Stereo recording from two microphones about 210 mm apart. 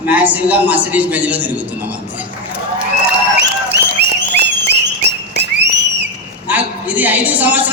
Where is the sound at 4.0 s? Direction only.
50° right (ahead or behind).